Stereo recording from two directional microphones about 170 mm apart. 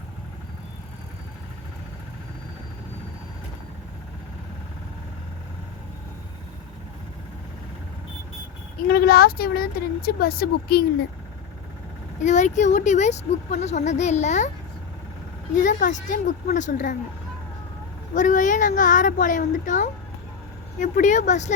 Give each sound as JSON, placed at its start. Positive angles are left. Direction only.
{"t": 8.9, "sound": "a woman's voice", "side_deg": 65}
{"t": 12.2, "sound": "speech", "side_deg": 45}
{"t": 15.5, "sound": "speech", "side_deg": 50}
{"t": 18.1, "sound": "speech", "side_deg": 50}